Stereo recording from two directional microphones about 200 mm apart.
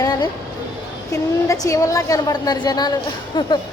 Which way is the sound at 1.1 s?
15° left (ahead or behind).